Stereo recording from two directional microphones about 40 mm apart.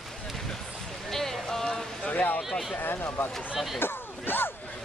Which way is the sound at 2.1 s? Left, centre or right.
Left.